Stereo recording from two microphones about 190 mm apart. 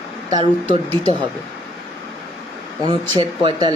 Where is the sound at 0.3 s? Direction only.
25° right (ahead or behind).